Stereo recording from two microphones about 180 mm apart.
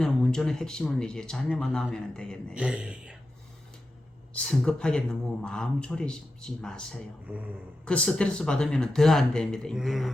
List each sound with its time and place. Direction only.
0.0 s speech: 5° left (ahead or behind)
4.4 s speech: 5° left (ahead or behind)
7.3 s speech: 10° right (ahead or behind)
7.9 s speech: 5° left (ahead or behind)